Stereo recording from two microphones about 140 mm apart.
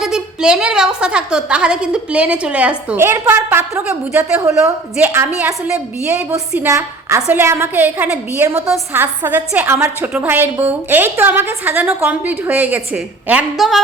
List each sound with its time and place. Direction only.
0.0 s a woman's voice: 5° right (ahead or behind)
6.7 s a woman's voice: 20° right (ahead or behind); by 13.8 s centre (ahead or behind)